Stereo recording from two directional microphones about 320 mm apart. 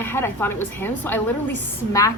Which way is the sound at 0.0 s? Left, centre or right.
Centre.